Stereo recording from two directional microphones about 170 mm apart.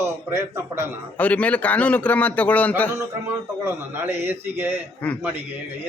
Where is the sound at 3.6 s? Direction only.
15° right (ahead or behind).